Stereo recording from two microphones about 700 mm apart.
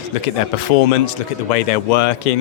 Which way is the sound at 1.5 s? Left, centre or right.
Left.